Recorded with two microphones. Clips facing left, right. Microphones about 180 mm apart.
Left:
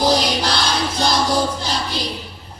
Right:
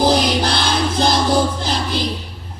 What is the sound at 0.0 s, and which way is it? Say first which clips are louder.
Music: right 2 dB; 55° right (ahead or behind).